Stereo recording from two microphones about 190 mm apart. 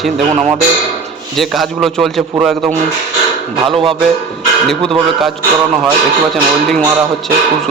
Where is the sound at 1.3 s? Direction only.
Centre (ahead or behind).